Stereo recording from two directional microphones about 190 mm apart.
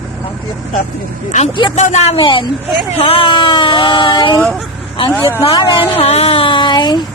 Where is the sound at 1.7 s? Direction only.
40° left (ahead or behind).